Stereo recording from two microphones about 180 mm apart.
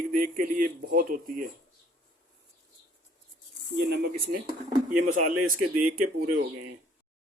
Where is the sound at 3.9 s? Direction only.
60° right (ahead or behind).